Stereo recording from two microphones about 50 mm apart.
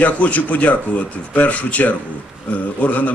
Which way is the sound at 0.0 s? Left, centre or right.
Left.